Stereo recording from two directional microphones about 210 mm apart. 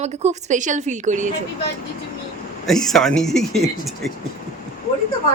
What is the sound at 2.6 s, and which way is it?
Speech, centre (ahead or behind).